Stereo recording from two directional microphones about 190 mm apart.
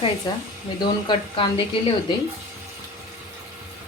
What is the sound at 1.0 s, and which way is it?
Speech, 25° left (ahead or behind).